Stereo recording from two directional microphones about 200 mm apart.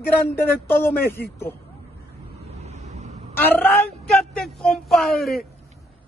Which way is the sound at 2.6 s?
35° right (ahead or behind).